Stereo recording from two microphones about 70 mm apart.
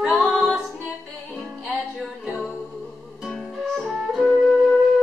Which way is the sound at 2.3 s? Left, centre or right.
Centre.